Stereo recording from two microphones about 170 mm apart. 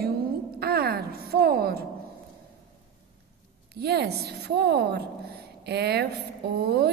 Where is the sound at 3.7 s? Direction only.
75° right (ahead or behind).